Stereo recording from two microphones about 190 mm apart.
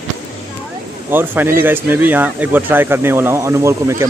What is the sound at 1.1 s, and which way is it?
Speech, 10° right (ahead or behind).